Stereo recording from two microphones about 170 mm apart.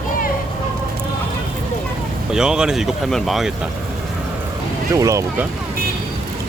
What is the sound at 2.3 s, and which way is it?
Speech, 5° right (ahead or behind).